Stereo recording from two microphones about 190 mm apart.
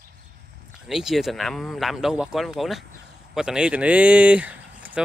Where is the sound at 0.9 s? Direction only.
Centre (ahead or behind).